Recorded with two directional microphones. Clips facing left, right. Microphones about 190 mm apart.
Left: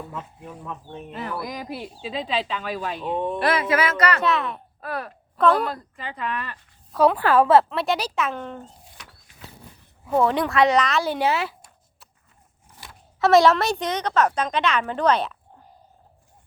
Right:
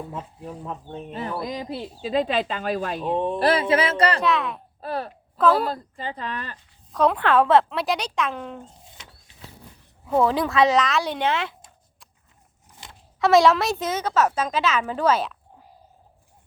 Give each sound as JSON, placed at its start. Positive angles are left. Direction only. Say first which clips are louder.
{"t": 0.1, "sound": "speech", "louder": "right 2 dB", "side_deg": -35}
{"t": 2.0, "sound": "speech", "louder": "right 5 dB", "side_deg": -45}
{"t": 3.2, "sound": "speech", "louder": "right 2 dB", "side_deg": -30}
{"t": 4.2, "sound": "a woman's voice", "louder": "even", "side_deg": 0}
{"t": 4.8, "sound": "speech", "louder": "right 2 dB", "side_deg": -30}
{"t": 5.4, "sound": "a woman's voice", "louder": "even", "side_deg": -5}
{"t": 5.6, "sound": "speech", "louder": "right 2 dB", "side_deg": -30}
{"t": 6.9, "sound": "a woman's voice", "louder": "left 1 dB", "side_deg": 5}
{"t": 10.1, "sound": "a woman's voice", "louder": "even", "side_deg": 0}
{"t": 13.1, "sound": "a woman's voice", "louder": "left 1 dB", "side_deg": 0}